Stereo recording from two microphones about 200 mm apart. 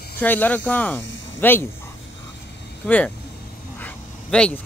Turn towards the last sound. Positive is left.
turn(degrees=5)  # may be behind; listen again after turning